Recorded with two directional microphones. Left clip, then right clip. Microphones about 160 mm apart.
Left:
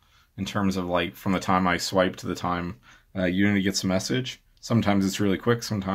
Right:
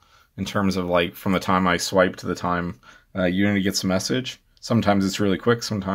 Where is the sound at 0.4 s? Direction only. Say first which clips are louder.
Right 4 dB; 30° right (ahead or behind).